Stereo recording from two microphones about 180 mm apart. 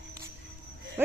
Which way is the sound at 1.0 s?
15° right (ahead or behind).